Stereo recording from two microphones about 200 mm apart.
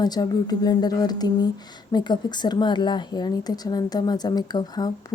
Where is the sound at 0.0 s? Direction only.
20° left (ahead or behind).